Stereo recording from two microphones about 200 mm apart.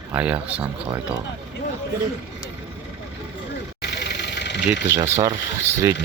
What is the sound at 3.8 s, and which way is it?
Vehicle, 55° left (ahead or behind).